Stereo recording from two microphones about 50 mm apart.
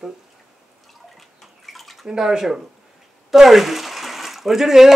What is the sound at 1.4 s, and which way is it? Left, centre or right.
Bathtub, centre.